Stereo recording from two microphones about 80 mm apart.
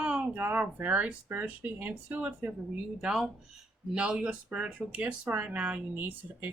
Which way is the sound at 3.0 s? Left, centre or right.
Centre.